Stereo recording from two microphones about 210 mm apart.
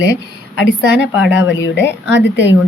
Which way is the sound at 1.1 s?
60° left (ahead or behind).